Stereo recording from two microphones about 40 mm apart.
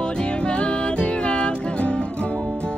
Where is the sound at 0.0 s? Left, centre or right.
Left.